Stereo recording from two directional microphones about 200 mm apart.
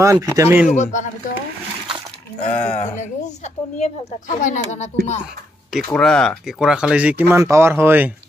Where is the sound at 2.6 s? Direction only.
10° left (ahead or behind).